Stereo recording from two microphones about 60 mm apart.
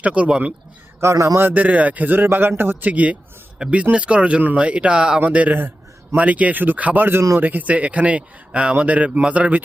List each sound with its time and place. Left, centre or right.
0.0 s speech: centre
1.1 s a man's voice: right
1.4 s a man's voice: right
2.9 s speech: right